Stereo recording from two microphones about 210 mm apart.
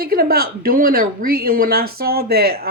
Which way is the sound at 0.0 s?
45° right (ahead or behind).